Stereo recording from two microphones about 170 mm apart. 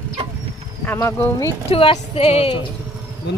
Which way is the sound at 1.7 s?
35° left (ahead or behind).